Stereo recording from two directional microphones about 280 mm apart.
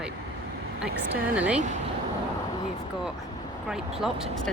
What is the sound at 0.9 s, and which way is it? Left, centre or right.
Speech, right.